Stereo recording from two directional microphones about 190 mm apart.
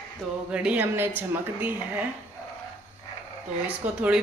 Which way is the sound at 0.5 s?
5° right (ahead or behind).